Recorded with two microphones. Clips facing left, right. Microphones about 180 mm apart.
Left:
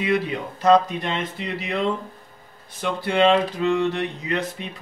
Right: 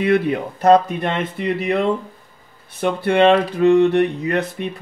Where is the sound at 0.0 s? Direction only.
55° right (ahead or behind).